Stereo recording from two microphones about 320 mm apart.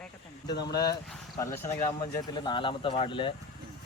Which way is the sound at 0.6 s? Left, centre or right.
Centre.